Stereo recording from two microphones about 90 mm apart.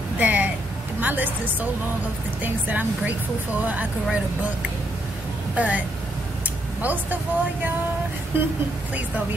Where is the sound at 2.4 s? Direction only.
20° right (ahead or behind).